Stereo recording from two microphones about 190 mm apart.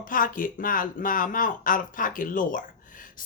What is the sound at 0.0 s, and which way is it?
Speech, 45° left (ahead or behind).